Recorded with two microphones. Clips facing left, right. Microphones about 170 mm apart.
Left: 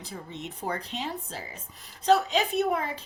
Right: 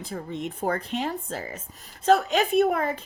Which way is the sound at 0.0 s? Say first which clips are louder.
Right 7 dB; 50° right (ahead or behind).